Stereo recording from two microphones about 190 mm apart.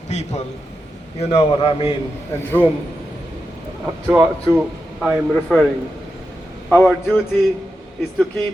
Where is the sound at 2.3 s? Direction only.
10° left (ahead or behind).